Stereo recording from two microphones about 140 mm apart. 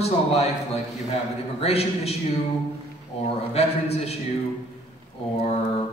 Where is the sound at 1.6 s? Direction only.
45° left (ahead or behind).